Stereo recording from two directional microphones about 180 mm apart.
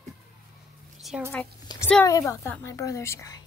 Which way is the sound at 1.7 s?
20° left (ahead or behind).